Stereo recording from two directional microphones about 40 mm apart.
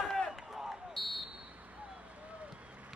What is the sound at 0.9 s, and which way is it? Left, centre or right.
Buzzer, centre.